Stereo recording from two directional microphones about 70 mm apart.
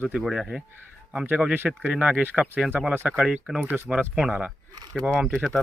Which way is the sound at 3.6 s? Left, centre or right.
Right.